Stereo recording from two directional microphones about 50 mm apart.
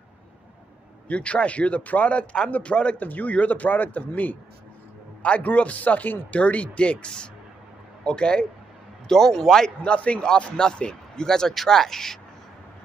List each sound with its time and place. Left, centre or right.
1.0 s a man's voice: left
3.0 s a man's voice: left
9.1 s a man's voice: centre
9.8 s a man's voice: left
10.2 s a man's voice: centre